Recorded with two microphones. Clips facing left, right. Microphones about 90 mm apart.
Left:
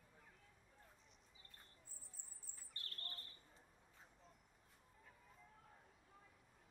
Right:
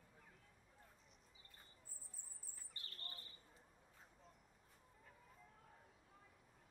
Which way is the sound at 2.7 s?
5° right (ahead or behind).